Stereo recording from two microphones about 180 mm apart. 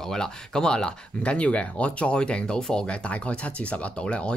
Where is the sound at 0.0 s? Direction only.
5° left (ahead or behind).